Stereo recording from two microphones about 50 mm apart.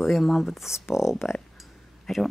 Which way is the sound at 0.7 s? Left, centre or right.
Left.